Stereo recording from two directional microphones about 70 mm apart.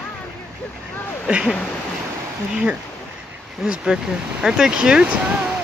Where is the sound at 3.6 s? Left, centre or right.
Centre.